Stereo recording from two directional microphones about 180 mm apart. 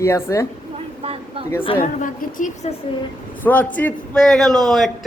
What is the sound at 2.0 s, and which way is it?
Speech, 45° left (ahead or behind).